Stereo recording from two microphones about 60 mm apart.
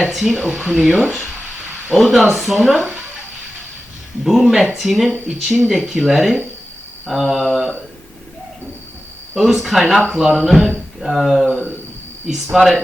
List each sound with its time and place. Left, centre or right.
0.1 s speech: centre
0.7 s speech: centre
2.0 s speech: centre
4.2 s speech: centre
9.3 s speech: centre
10.1 s speech: centre
10.4 s speech: centre